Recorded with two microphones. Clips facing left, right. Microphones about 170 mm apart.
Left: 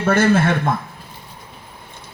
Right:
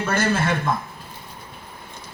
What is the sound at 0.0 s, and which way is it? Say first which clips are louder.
Speech: left 6 dB; 55° left (ahead or behind).